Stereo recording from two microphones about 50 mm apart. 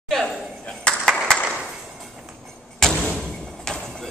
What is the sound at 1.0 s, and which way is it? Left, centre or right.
Clapping, centre.